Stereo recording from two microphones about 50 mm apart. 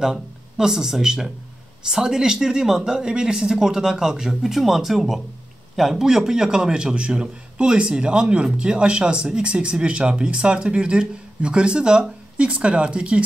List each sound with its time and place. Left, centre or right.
0.0 s speech: centre